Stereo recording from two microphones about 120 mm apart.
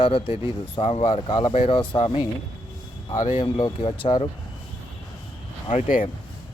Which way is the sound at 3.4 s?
45° left (ahead or behind).